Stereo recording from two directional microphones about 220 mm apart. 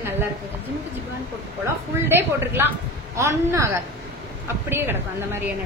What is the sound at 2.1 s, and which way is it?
A woman's voice, 10° right (ahead or behind).